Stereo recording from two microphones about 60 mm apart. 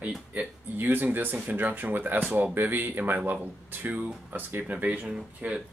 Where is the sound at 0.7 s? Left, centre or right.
Right.